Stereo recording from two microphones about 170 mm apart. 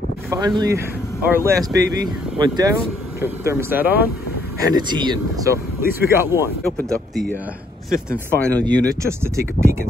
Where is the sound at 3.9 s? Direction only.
65° left (ahead or behind).